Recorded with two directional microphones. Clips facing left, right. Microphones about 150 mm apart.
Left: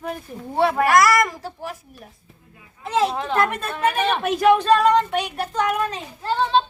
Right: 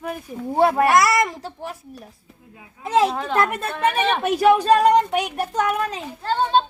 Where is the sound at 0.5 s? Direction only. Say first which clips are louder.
Right 2 dB; 40° right (ahead or behind).